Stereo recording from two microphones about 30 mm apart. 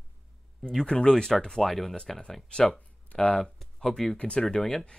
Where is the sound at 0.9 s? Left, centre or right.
Left.